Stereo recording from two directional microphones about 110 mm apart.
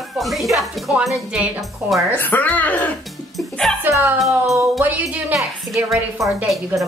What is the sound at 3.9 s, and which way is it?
Music, 20° right (ahead or behind).